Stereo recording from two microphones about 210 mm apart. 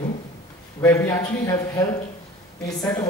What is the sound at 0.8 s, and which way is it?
A man's voice, 15° left (ahead or behind).